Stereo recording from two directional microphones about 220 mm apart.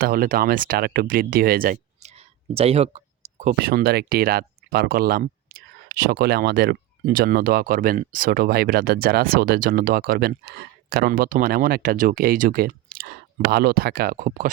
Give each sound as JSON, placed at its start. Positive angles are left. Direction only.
{"t": 0.0, "sound": "speech", "side_deg": -40}
{"t": 3.6, "sound": "speech", "side_deg": -45}